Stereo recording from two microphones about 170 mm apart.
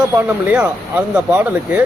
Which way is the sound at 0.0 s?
10° right (ahead or behind).